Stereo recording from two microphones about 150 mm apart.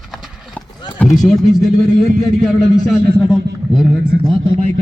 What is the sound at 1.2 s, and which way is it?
A man's voice, 5° left (ahead or behind).